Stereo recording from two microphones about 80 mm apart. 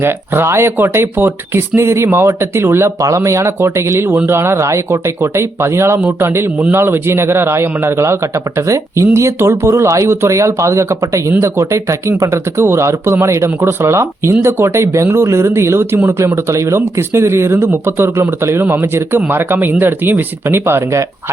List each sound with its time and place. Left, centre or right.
0.0 s speech: right